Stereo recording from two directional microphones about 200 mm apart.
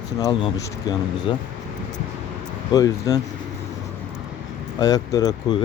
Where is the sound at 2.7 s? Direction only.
20° left (ahead or behind).